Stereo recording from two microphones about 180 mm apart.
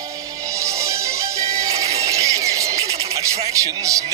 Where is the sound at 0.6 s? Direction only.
15° right (ahead or behind).